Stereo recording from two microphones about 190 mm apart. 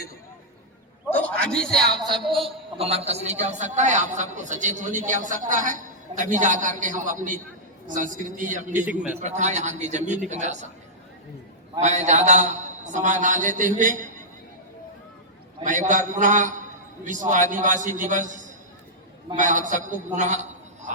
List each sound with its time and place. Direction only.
1.1 s a sound: 5° left (ahead or behind)
2.0 s a woman's voice: centre (ahead or behind)
2.7 s a man's voice: 30° right (ahead or behind)
8.7 s a man's voice: 10° right (ahead or behind)
9.1 s a man's voice: 40° right (ahead or behind)
11.8 s a man's voice: 40° right (ahead or behind)
15.6 s a man's voice: 40° right (ahead or behind)